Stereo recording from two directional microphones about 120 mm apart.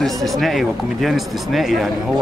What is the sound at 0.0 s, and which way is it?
A man's voice, centre (ahead or behind).